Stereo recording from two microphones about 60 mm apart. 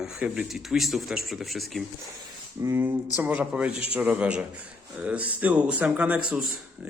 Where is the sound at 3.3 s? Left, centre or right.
Right.